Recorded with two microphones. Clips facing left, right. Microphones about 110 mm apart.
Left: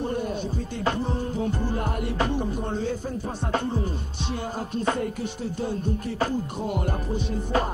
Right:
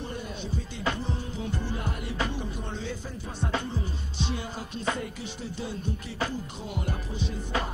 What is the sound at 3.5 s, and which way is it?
Speech, 50° left (ahead or behind).